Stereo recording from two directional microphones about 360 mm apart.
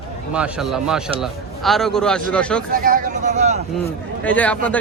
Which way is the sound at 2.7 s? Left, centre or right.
Right.